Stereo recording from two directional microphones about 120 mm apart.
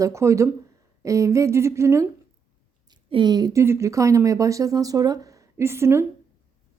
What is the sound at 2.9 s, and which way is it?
A woman's voice, 40° right (ahead or behind).